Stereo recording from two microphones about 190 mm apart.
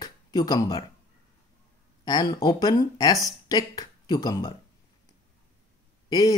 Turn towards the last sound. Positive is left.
turn(degrees=20)  # may be behind; listen again after turning